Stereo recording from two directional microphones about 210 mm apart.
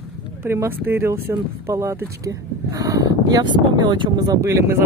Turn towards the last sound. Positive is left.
turn(degrees=-15)  # may be behind; listen again after turning